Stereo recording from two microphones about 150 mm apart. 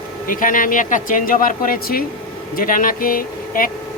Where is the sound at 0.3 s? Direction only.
65° left (ahead or behind).